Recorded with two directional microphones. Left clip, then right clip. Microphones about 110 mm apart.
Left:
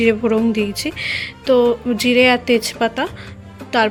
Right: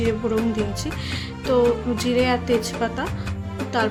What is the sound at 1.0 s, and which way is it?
Speech, 20° left (ahead or behind).